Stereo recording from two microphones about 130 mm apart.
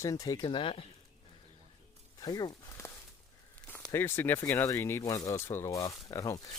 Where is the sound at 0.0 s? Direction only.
25° left (ahead or behind); by 0.9 s 45° left (ahead or behind).